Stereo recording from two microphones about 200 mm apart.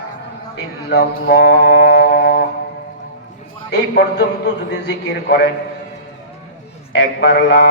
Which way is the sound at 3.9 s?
55° left (ahead or behind).